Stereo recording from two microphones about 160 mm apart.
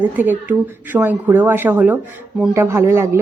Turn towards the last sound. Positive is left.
turn(degrees=-15)  # may be behind; listen again after turning